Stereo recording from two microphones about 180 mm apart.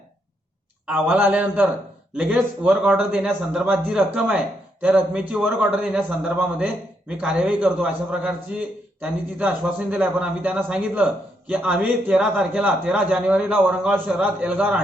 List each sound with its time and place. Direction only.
0.9 s a man's voice: 10° right (ahead or behind)